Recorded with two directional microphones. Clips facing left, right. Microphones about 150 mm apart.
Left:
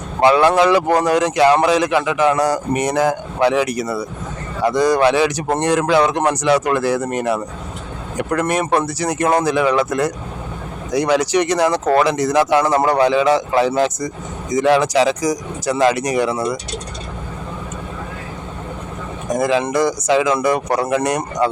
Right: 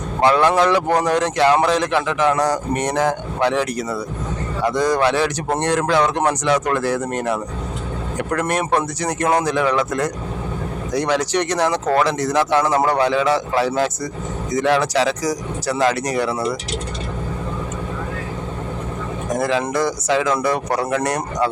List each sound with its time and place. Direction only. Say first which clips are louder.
0.2 s speech: left 3 dB; 10° left (ahead or behind)
19.4 s speech: left 3 dB; 15° left (ahead or behind)